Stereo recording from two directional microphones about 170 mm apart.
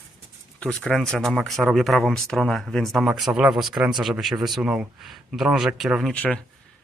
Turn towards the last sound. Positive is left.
turn(degrees=10)  # may be behind; listen again after turning